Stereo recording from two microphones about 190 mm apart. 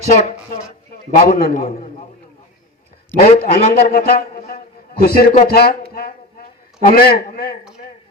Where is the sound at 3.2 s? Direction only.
40° left (ahead or behind).